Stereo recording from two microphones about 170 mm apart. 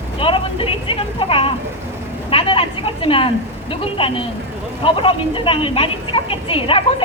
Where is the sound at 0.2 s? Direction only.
30° left (ahead or behind).